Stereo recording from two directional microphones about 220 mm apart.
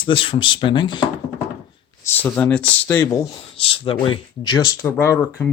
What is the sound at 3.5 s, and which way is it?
Speech, 25° left (ahead or behind).